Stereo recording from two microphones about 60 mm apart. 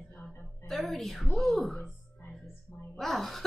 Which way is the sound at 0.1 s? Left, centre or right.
Left.